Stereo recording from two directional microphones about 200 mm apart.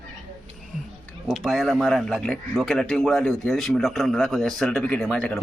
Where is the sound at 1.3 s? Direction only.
Centre (ahead or behind).